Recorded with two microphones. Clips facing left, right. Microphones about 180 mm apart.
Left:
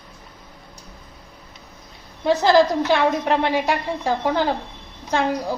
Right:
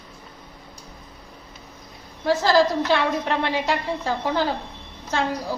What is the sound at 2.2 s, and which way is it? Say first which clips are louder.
A woman's voice: left 3 dB; 20° left (ahead or behind).